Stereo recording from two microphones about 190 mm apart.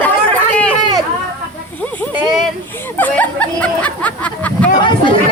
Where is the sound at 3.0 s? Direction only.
10° left (ahead or behind).